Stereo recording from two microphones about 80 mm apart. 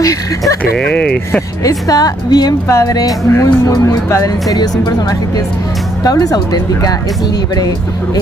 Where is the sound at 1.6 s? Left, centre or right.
Left.